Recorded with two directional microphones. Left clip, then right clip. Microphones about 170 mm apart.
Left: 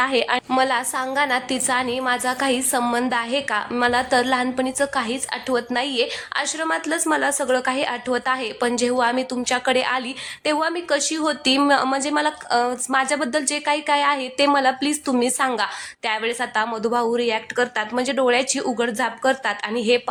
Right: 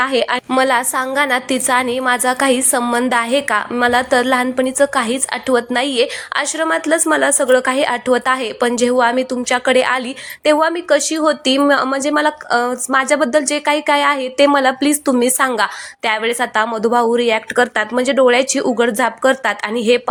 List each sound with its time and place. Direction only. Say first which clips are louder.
0.0 s a woman's voice: right 4 dB; 15° right (ahead or behind)
0.5 s a woman's voice: right 7 dB; 25° right (ahead or behind)